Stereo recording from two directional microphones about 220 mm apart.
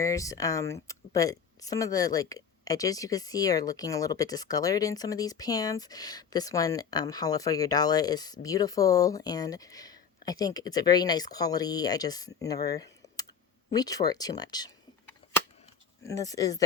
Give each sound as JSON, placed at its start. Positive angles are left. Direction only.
{"t": 0.0, "sound": "speech", "side_deg": 15}